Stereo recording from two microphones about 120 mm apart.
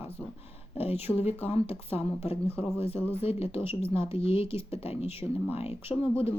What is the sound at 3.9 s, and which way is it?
Speech, 55° left (ahead or behind).